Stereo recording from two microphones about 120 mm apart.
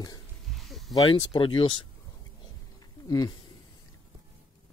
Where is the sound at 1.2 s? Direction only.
45° left (ahead or behind).